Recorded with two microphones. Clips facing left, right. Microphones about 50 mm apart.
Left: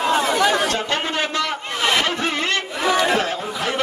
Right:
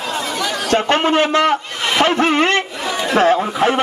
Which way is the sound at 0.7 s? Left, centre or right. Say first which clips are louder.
Right 8 dB; right.